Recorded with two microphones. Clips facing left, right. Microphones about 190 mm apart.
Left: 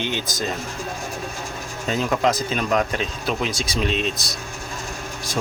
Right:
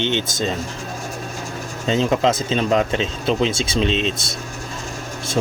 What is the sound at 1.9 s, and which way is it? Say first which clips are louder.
Speech: right 3 dB; 25° right (ahead or behind).